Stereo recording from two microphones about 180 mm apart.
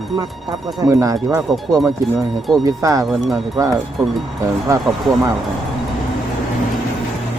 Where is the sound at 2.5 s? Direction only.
20° right (ahead or behind).